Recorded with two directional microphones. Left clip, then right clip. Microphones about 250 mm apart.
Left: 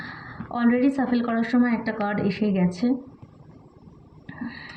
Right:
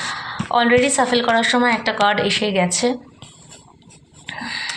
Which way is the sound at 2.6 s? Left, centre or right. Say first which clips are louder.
Right 8 dB; centre.